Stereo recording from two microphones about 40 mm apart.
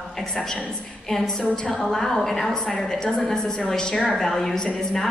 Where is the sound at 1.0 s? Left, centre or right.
Centre.